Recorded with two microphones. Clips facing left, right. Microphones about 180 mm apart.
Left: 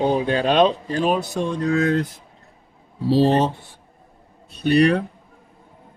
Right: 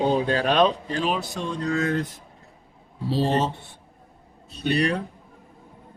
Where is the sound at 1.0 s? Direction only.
50° left (ahead or behind).